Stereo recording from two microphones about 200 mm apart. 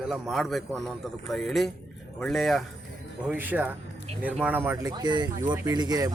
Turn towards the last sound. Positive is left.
turn(degrees=-20)  # may be behind; listen again after turning